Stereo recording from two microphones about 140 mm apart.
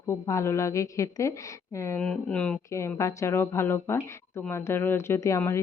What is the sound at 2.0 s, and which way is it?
Speech, 5° left (ahead or behind).